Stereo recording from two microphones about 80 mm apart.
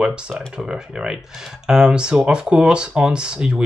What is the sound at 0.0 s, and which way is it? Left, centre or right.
Speech, centre.